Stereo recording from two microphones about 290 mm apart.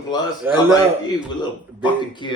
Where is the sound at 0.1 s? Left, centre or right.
Centre.